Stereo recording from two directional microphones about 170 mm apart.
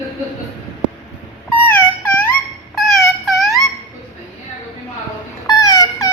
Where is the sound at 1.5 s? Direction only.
10° left (ahead or behind).